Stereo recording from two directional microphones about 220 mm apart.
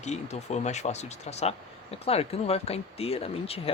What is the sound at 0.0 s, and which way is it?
Speech, 30° left (ahead or behind).